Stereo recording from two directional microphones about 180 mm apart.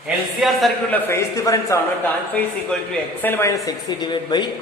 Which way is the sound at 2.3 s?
5° left (ahead or behind).